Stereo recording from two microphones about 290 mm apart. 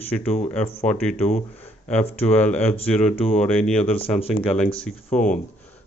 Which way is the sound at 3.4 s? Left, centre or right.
Centre.